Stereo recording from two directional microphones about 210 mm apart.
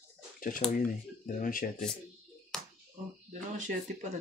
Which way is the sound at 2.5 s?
Centre (ahead or behind).